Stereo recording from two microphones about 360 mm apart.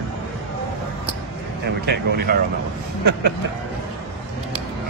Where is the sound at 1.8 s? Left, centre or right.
Right.